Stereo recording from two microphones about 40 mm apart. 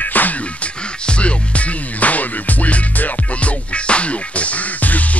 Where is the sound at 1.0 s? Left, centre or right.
Left.